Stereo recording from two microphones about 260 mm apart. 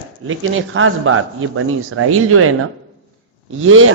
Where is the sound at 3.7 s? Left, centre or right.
Right.